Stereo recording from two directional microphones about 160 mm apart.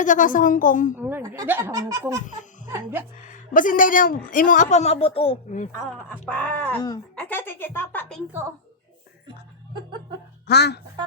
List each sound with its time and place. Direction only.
0.0 s a woman's voice: 55° left (ahead or behind)
0.9 s speech: 10° right (ahead or behind)
3.2 s a woman's voice: 55° left (ahead or behind); by 5.4 s 35° left (ahead or behind)
5.7 s speech: 10° left (ahead or behind)
8.3 s speech: 15° right (ahead or behind)
10.4 s speech: 90° left